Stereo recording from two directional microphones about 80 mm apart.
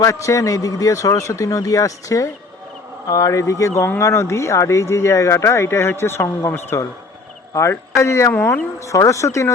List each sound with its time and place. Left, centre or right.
0.0 s a man's voice: left